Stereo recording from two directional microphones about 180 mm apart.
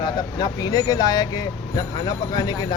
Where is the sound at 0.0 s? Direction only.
20° left (ahead or behind).